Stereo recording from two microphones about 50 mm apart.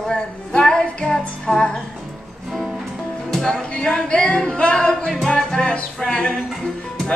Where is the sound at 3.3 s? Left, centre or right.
Centre.